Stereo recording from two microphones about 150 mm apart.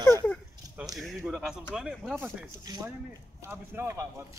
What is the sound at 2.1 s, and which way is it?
Speech, 20° right (ahead or behind).